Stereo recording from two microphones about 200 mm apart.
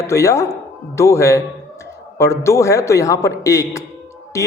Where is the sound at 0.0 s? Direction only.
15° left (ahead or behind).